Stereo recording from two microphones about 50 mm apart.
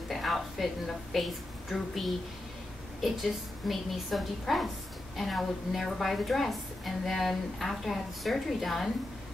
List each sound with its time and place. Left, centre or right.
0.1 s a woman's voice: centre